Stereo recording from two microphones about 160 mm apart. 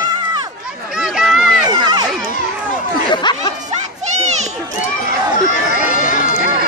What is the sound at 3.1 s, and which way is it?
Speech, 30° left (ahead or behind).